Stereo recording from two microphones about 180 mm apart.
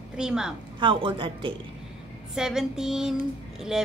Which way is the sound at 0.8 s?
25° right (ahead or behind).